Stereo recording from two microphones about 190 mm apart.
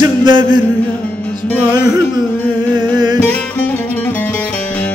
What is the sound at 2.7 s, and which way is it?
Music, 20° right (ahead or behind).